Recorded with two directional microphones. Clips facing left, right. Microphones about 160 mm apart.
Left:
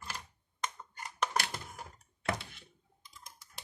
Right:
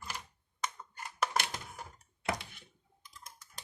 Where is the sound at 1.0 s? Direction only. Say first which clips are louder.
Even; 10° right (ahead or behind).